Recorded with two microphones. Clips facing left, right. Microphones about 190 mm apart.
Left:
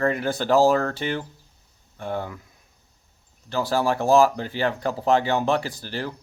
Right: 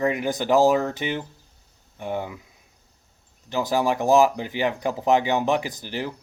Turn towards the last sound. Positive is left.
turn(degrees=-15)  # may be behind; listen again after turning